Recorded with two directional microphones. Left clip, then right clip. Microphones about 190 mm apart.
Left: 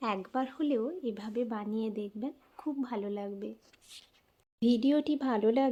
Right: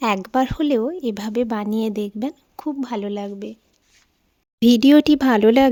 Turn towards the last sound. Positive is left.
turn(degrees=-65)  # may be behind; listen again after turning